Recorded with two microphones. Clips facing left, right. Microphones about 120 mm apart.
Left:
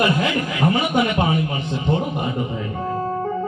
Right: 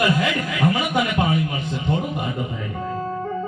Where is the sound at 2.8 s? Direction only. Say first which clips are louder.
Left 3 dB; 40° left (ahead or behind).